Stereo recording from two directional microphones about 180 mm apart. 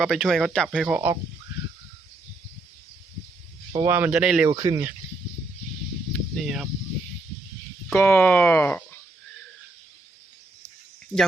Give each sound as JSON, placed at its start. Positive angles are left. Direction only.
{"t": 0.0, "sound": "speech", "side_deg": 0}
{"t": 3.8, "sound": "speech", "side_deg": -10}
{"t": 4.4, "sound": "speech", "side_deg": -20}
{"t": 6.1, "sound": "speech", "side_deg": 0}
{"t": 7.9, "sound": "speech", "side_deg": 10}